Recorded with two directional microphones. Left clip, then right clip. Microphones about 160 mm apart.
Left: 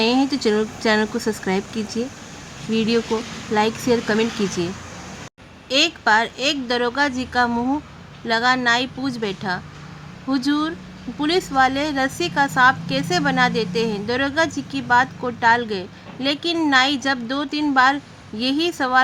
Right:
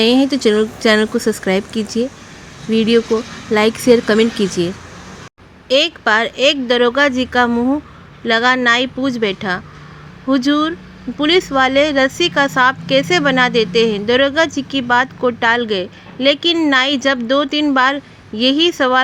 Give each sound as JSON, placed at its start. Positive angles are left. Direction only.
{"t": 0.0, "sound": "speech", "side_deg": -20}